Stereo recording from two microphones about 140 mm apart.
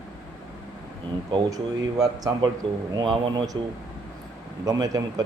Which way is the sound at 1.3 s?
25° right (ahead or behind).